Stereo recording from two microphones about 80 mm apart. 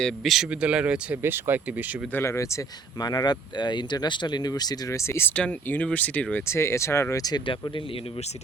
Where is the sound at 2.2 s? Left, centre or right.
Left.